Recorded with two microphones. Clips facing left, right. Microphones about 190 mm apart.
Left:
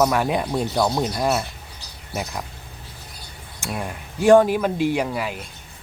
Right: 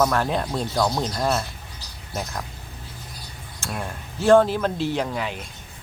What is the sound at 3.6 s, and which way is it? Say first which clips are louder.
Speech: left 2 dB; 10° left (ahead or behind).